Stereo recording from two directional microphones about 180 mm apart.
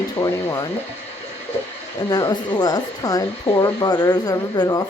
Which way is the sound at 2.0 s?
20° left (ahead or behind).